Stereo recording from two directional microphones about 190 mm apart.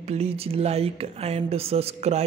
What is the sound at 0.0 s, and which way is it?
Speech, 35° right (ahead or behind).